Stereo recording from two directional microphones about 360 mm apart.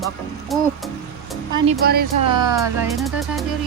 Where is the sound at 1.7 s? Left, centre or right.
Right.